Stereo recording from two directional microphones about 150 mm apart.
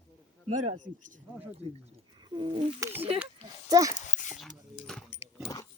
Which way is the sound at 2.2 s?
30° right (ahead or behind).